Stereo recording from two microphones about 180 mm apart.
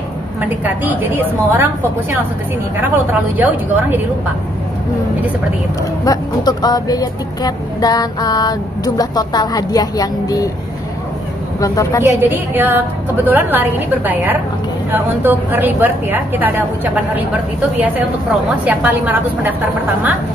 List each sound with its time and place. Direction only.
0.4 s a woman's voice: 10° right (ahead or behind)
3.3 s a woman's voice: 10° right (ahead or behind)
6.0 s speech: 20° left (ahead or behind)
11.6 s speech: 20° left (ahead or behind)
12.0 s a woman's voice: 10° right (ahead or behind)
18.6 s a woman's voice: 10° right (ahead or behind)